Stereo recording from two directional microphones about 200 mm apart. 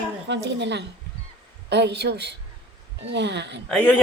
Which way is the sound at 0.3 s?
60° right (ahead or behind).